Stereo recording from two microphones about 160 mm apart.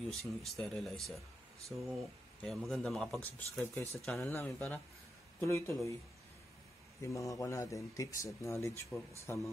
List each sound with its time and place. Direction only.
0.1 s speech: centre (ahead or behind)
4.0 s speech: centre (ahead or behind)
4.3 s speech: 15° left (ahead or behind)
7.0 s speech: 20° left (ahead or behind)